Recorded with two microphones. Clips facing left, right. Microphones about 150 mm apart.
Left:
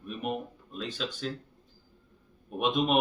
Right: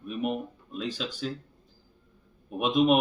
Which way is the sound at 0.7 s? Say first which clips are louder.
Right 2 dB; 5° right (ahead or behind).